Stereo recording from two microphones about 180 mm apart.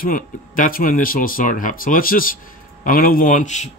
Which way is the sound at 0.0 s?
50° left (ahead or behind).